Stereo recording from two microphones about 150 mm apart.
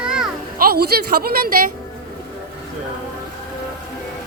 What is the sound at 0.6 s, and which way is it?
A woman's voice, 90° right.